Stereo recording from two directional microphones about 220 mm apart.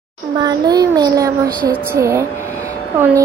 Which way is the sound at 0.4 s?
20° right (ahead or behind).